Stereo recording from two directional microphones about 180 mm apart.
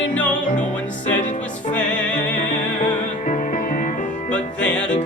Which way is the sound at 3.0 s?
45° left (ahead or behind).